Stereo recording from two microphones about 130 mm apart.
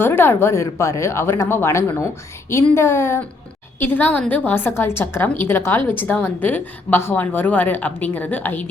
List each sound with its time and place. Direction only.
0.0 s a woman's voice: 15° left (ahead or behind)